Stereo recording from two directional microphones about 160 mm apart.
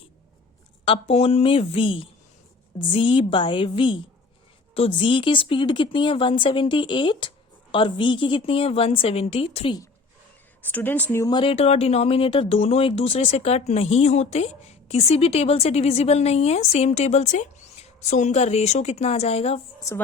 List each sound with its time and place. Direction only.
0.9 s speech: 40° left (ahead or behind)
10.6 s speech: 10° left (ahead or behind)
11.3 s speech: 35° left (ahead or behind)